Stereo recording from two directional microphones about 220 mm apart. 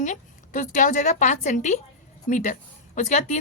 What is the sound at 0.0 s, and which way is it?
Speech, 35° left (ahead or behind).